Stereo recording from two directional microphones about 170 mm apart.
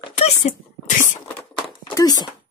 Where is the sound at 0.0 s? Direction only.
40° left (ahead or behind).